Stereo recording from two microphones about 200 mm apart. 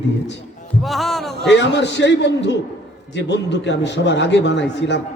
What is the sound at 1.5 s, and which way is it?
A man's voice, 60° left (ahead or behind).